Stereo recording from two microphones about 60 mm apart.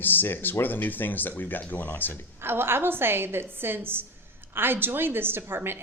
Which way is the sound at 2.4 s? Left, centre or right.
Right.